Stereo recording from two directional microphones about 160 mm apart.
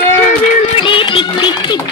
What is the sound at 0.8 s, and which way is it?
Music, 30° left (ahead or behind).